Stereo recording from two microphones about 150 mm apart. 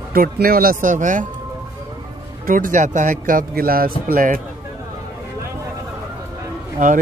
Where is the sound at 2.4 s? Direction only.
70° right (ahead or behind).